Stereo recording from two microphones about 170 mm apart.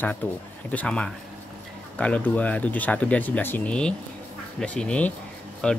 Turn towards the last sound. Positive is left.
turn(degrees=5)  # may be behind; listen again after turning